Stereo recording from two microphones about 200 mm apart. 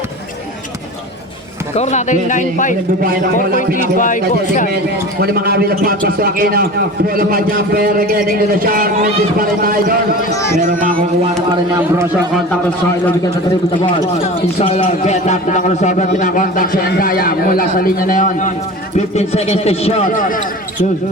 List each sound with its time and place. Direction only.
1.7 s a man's voice: 35° left (ahead or behind)
3.9 s a man's voice: 40° left (ahead or behind)
5.2 s a man's voice: 50° right (ahead or behind)
14.6 s a man's voice: 35° left (ahead or behind)